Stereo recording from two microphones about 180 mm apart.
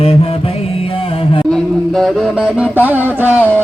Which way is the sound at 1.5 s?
Centre (ahead or behind).